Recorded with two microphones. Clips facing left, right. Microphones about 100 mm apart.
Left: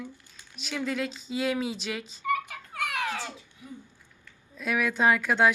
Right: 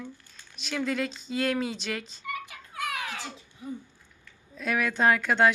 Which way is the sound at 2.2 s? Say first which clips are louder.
Left 8 dB; 45° left (ahead or behind).